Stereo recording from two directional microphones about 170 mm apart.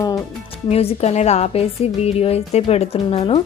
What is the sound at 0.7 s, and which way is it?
A woman's voice, 35° left (ahead or behind).